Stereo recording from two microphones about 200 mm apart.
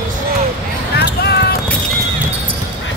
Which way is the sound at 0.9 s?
55° left (ahead or behind).